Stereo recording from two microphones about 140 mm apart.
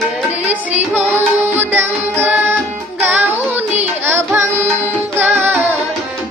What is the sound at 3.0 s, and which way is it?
Carnatic music, 15° right (ahead or behind).